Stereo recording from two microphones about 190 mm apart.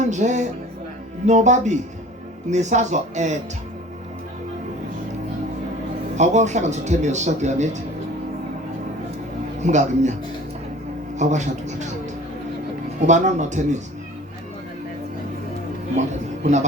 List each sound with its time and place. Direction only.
0.0 s speech: 40° right (ahead or behind)
6.1 s speech: 40° right (ahead or behind)
9.6 s speech: 40° right (ahead or behind)
11.2 s speech: 40° right (ahead or behind)
13.1 s speech: 40° right (ahead or behind)
16.0 s speech: 40° right (ahead or behind)